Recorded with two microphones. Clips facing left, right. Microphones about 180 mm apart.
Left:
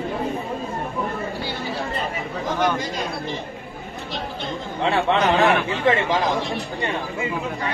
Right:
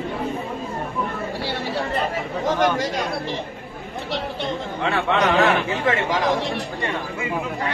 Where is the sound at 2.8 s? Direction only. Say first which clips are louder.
Right 3 dB; 70° right (ahead or behind).